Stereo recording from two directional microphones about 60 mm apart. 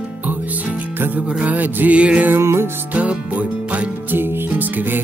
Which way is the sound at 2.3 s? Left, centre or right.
Right.